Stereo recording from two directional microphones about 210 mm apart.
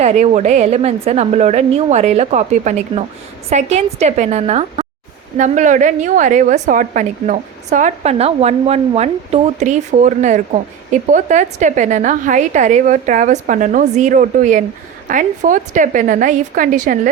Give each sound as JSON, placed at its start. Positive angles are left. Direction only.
{"t": 0.0, "sound": "a woman's voice", "side_deg": -30}